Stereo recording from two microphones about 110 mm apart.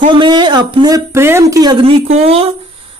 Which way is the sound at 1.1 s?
25° right (ahead or behind).